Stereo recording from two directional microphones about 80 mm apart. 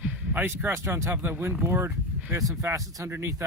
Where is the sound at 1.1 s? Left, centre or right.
Right.